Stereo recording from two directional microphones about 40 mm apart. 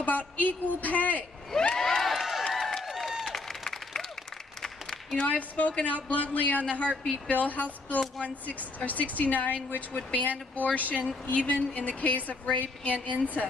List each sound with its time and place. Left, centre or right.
0.0 s a woman's voice: left
1.8 s crowd: centre
2.5 s a sound: centre
4.6 s applause: centre
5.2 s a woman's voice: left